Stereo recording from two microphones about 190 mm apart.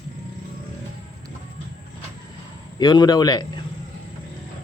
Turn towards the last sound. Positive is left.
turn(degrees=20)  # may be behind; listen again after turning